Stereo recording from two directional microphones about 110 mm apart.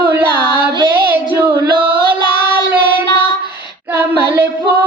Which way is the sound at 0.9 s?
20° right (ahead or behind).